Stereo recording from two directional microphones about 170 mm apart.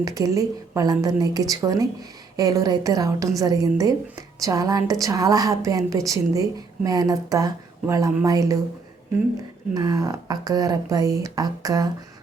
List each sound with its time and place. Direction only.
0.0 s a woman's voice: 20° right (ahead or behind)
9.7 s a woman's voice: 20° right (ahead or behind)